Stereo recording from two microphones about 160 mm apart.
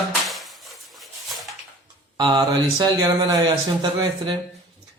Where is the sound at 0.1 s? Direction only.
Centre (ahead or behind).